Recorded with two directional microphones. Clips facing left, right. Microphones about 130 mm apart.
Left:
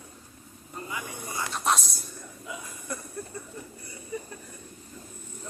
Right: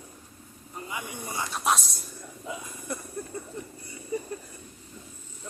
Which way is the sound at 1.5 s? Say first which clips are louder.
Even; centre (ahead or behind).